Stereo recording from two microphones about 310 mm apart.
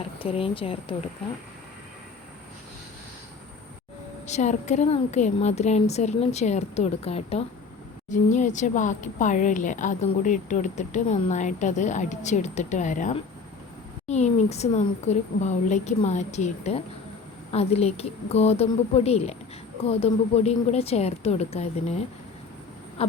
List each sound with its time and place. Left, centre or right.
0.2 s speech: centre
4.3 s speech: left